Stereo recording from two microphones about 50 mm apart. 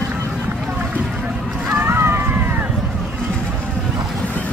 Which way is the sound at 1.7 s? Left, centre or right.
Right.